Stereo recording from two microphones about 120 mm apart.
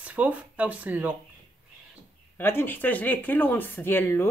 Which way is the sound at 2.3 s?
20° left (ahead or behind).